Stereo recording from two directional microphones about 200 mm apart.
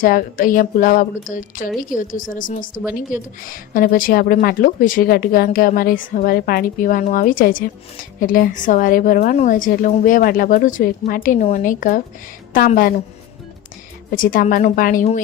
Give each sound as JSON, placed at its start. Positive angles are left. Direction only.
{"t": 0.0, "sound": "a woman's voice", "side_deg": 45}
{"t": 14.2, "sound": "speech", "side_deg": 45}